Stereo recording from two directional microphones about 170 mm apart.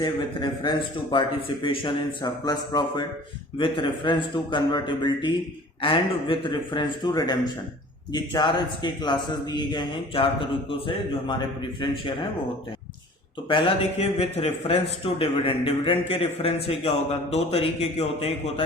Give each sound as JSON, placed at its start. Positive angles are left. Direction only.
{"t": 0.0, "sound": "a man's voice", "side_deg": 30}
{"t": 13.5, "sound": "a man's voice", "side_deg": 30}